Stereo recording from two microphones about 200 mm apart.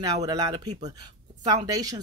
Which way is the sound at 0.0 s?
20° right (ahead or behind).